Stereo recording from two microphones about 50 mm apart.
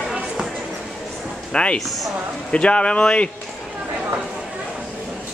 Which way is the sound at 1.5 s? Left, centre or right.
Left.